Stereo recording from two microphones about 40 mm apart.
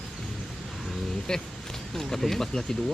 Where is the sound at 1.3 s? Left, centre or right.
Centre.